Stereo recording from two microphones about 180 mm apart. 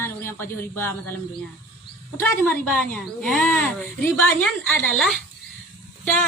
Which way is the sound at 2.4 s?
5° left (ahead or behind).